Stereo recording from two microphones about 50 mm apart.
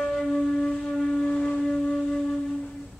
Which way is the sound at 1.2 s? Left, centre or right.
Left.